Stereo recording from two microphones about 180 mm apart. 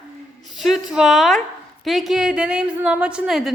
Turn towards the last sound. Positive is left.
turn(degrees=0)  # may be behind; listen again after turning